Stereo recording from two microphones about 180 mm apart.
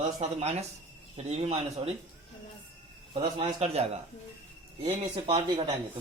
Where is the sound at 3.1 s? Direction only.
35° right (ahead or behind).